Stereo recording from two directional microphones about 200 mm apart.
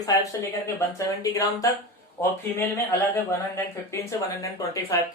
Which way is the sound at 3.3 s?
15° left (ahead or behind).